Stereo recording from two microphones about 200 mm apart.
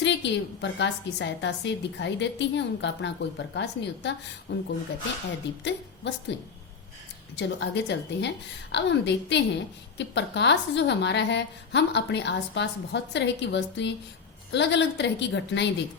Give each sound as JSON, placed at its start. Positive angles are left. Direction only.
{"t": 0.0, "sound": "a woman's voice", "side_deg": 60}
{"t": 7.3, "sound": "a woman's voice", "side_deg": 60}